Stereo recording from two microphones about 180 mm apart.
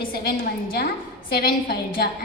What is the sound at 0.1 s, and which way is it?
A woman's voice, 55° left (ahead or behind).